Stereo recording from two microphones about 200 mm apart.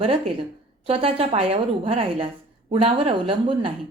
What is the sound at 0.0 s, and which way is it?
Speech, 30° right (ahead or behind).